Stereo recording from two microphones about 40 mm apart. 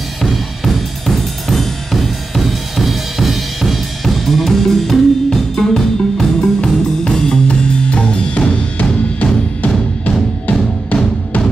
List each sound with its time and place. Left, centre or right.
0.2 s drum: centre
7.1 s drum kit: centre
8.7 s music: left